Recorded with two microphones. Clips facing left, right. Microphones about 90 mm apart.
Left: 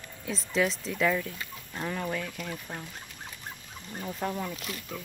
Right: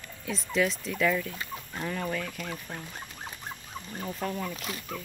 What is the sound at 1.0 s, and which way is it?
Speech, 15° left (ahead or behind).